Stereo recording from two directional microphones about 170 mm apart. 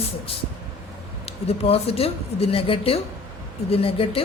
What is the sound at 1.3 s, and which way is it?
A woman's voice, 35° left (ahead or behind).